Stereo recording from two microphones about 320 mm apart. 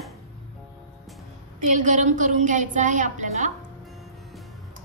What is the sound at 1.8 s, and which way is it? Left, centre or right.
A woman's voice, right.